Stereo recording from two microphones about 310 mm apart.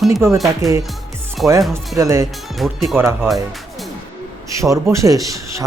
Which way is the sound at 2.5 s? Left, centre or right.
Centre.